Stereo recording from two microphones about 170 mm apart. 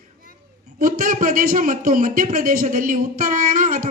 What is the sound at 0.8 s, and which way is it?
Speech, 55° right (ahead or behind).